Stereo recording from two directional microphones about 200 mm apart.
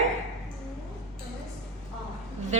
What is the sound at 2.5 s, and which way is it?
Speech, 35° right (ahead or behind).